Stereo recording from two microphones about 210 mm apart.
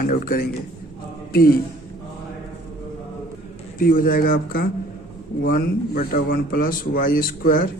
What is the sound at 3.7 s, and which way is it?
A man's voice, 40° left (ahead or behind).